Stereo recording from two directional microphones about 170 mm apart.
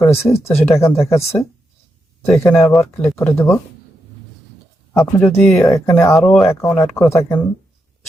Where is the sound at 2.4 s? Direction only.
15° left (ahead or behind).